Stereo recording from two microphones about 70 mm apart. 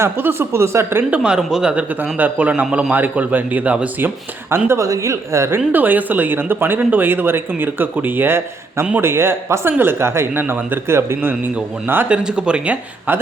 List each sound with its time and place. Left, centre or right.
0.0 s speech: right
1.1 s speech: centre
2.1 s speech: right
2.6 s speech: centre
2.9 s speech: right
4.5 s a woman's voice: right
5.7 s speech: right
12.0 s speech: centre